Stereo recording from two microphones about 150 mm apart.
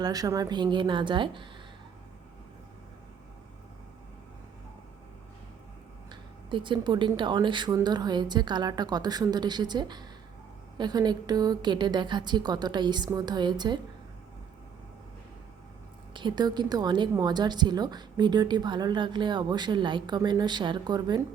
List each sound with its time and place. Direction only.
0.0 s a woman's voice: 25° right (ahead or behind)
6.1 s a woman's voice: 30° right (ahead or behind)
16.1 s a woman's voice: 30° right (ahead or behind)